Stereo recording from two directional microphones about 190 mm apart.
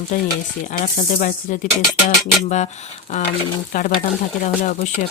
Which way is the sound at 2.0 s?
40° left (ahead or behind).